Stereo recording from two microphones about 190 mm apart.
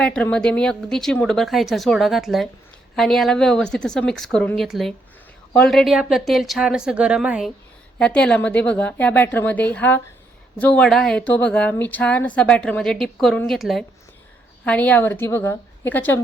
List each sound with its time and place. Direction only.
0.0 s a woman's voice: 5° left (ahead or behind)